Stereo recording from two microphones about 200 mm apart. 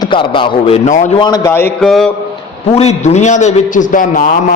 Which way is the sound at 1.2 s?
20° left (ahead or behind).